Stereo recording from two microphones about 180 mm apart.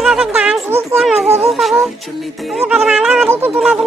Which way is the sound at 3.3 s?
15° right (ahead or behind).